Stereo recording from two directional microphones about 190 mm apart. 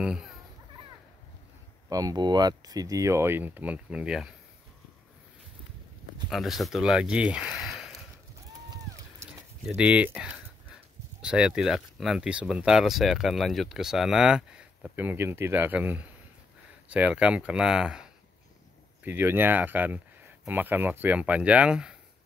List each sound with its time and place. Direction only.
0.0 s speech: 5° right (ahead or behind)
1.9 s speech: 20° right (ahead or behind); by 4.3 s 5° right (ahead or behind)
6.2 s speech: centre (ahead or behind)
9.8 s speech: 5° right (ahead or behind)